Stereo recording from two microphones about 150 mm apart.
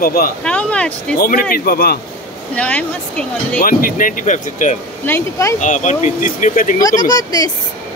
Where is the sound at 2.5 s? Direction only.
10° left (ahead or behind).